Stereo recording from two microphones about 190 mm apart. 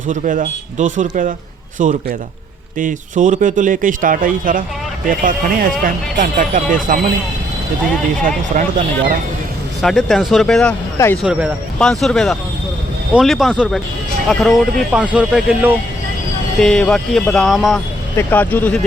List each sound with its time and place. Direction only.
0.1 s speech: 45° right (ahead or behind)
8.5 s speech: 40° right (ahead or behind)
9.8 s speech: centre (ahead or behind)
11.2 s speech: 5° right (ahead or behind)
18.2 s speech: 10° left (ahead or behind)